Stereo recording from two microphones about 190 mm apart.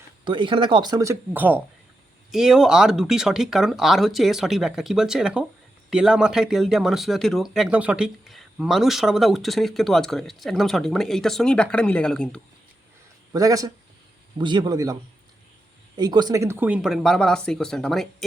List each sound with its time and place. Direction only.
0.3 s speech: 25° right (ahead or behind); by 12.4 s 5° left (ahead or behind)
13.3 s a man's voice: 20° right (ahead or behind)
16.0 s speech: 20° right (ahead or behind); by 18.3 s centre (ahead or behind)